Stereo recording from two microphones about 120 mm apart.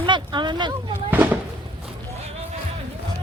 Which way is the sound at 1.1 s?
15° right (ahead or behind).